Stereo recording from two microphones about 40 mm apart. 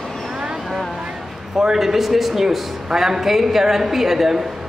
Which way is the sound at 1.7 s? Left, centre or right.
Centre.